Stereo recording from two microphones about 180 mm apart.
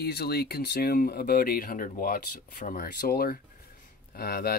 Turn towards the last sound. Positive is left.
turn(degrees=55)  # may be behind; listen again after turning